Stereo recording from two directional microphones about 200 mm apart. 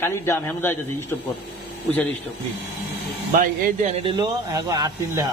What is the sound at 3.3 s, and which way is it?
Speech, 45° right (ahead or behind).